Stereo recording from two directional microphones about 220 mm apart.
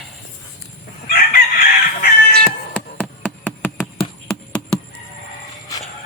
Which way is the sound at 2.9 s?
5° left (ahead or behind).